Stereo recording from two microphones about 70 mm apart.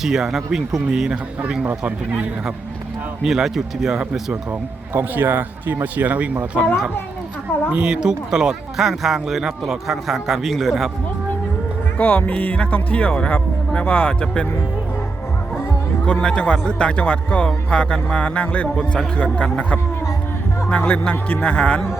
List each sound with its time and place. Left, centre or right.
0.0 s speech: centre
3.2 s speech: centre
4.9 s speech: right
7.7 s speech: centre
11.9 s speech: left
16.2 s speech: centre
18.7 s speech: centre
19.1 s speech: centre